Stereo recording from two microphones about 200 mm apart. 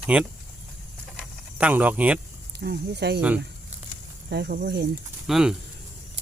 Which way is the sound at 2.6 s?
55° right (ahead or behind).